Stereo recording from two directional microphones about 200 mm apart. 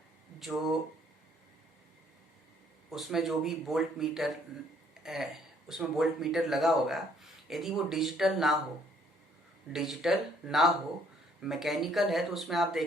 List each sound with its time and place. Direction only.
0.3 s speech: centre (ahead or behind)
2.9 s speech: centre (ahead or behind)
9.7 s speech: centre (ahead or behind)